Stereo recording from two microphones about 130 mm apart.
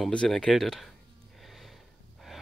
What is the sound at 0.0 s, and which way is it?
Speech, 5° left (ahead or behind).